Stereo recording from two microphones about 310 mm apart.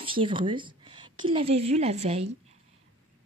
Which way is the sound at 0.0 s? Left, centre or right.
Centre.